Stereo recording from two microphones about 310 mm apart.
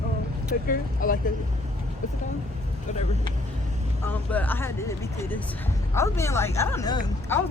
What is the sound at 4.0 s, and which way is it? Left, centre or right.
Speech, centre.